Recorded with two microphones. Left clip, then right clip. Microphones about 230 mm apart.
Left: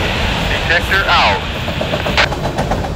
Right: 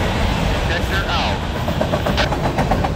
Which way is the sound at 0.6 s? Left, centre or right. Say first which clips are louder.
Left 8 dB; left.